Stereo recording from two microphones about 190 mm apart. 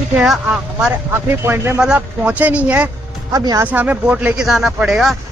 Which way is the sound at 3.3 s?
20° right (ahead or behind).